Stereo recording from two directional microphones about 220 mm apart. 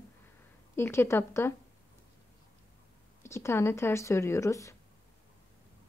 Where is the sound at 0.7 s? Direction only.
10° left (ahead or behind).